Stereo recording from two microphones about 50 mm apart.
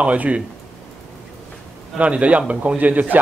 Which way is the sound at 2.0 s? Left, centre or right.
Right.